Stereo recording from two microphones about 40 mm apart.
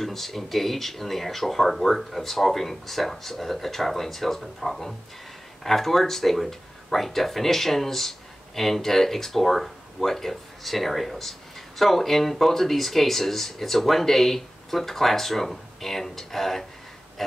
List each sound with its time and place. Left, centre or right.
0.0 s speech: centre